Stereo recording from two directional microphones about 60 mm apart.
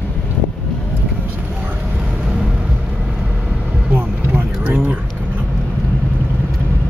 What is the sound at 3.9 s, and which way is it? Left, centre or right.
Vehicle, right.